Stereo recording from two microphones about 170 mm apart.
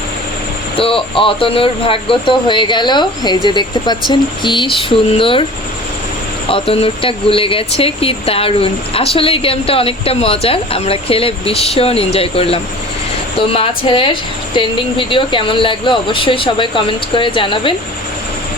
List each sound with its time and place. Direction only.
0.8 s speech: 30° left (ahead or behind)
6.5 s speech: 35° left (ahead or behind)